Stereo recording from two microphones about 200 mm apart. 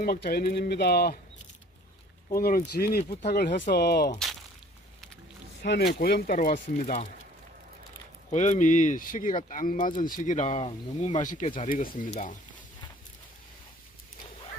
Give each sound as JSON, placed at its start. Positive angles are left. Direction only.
{"t": 0.0, "sound": "speech", "side_deg": 50}
{"t": 2.3, "sound": "speech", "side_deg": 45}
{"t": 5.6, "sound": "speech", "side_deg": 55}
{"t": 8.3, "sound": "speech", "side_deg": 35}